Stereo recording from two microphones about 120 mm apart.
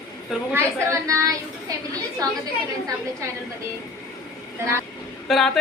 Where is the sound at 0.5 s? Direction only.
25° right (ahead or behind).